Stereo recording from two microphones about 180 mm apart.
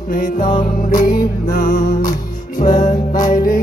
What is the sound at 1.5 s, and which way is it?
Music, 55° left (ahead or behind).